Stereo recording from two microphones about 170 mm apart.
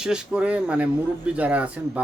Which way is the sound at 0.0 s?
5° right (ahead or behind).